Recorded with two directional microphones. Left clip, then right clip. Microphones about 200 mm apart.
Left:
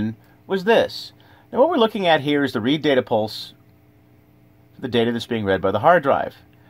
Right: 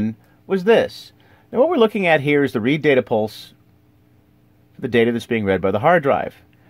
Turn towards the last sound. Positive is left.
turn(degrees=-45)  # may be behind; listen again after turning